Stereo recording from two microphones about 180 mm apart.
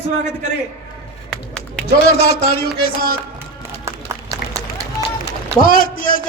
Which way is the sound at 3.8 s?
15° right (ahead or behind).